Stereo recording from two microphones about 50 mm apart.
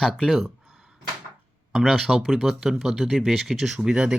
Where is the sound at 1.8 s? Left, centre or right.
Centre.